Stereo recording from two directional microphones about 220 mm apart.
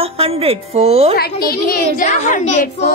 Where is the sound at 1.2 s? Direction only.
45° left (ahead or behind).